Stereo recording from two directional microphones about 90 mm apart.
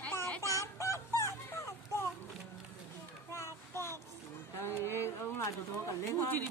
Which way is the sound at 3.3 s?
30° left (ahead or behind).